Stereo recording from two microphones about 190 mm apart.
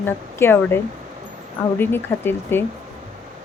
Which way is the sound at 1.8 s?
10° left (ahead or behind).